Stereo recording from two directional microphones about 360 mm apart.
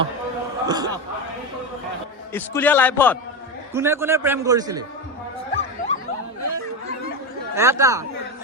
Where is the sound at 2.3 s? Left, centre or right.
Centre.